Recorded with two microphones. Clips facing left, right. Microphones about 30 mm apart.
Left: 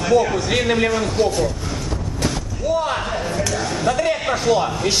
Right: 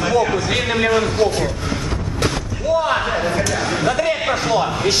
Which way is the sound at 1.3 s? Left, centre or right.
Right.